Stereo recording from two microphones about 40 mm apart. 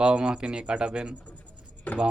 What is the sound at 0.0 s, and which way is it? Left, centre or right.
Speech, right.